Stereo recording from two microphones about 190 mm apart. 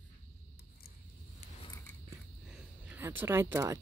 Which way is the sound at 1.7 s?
20° left (ahead or behind).